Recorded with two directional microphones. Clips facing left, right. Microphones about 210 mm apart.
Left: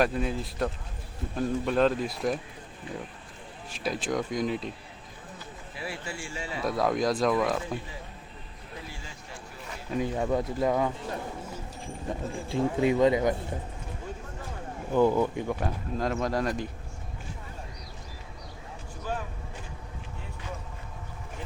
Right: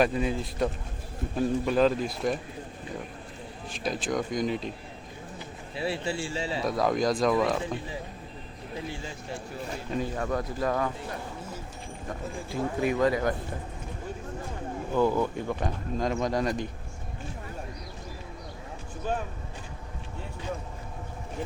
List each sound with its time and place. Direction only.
0.0 s speech: centre (ahead or behind)
3.8 s speech: 5° left (ahead or behind)
5.7 s a man's voice: 25° right (ahead or behind)
6.7 s speech: centre (ahead or behind)
10.0 s speech: 20° left (ahead or behind)
12.0 s speech: 25° left (ahead or behind)
14.9 s speech: 15° left (ahead or behind)